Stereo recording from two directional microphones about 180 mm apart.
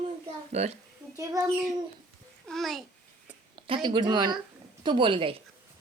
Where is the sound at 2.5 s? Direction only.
Centre (ahead or behind).